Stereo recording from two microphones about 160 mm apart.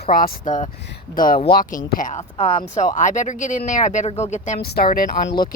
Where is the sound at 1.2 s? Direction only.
65° left (ahead or behind).